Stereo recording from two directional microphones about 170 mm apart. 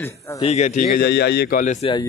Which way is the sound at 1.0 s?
75° left (ahead or behind).